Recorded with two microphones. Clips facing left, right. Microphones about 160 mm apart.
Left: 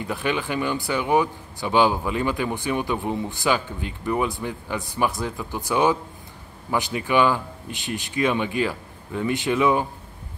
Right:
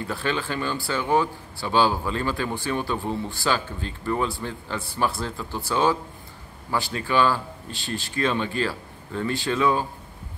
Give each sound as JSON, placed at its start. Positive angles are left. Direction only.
{"t": 0.0, "sound": "speech", "side_deg": 15}